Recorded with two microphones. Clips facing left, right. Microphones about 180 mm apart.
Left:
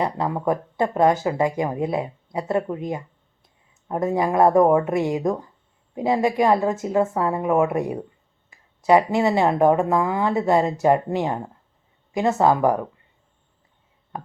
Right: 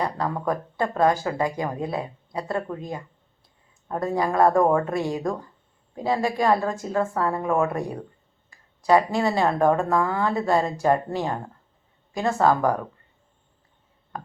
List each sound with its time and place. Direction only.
0.0 s speech: 20° left (ahead or behind)